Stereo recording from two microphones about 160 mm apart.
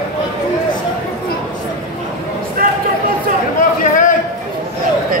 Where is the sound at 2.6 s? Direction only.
65° right (ahead or behind).